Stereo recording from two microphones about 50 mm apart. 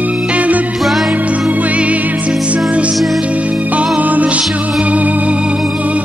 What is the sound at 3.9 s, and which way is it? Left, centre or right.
Music, right.